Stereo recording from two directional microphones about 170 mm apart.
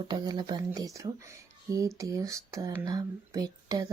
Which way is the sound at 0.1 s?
25° right (ahead or behind).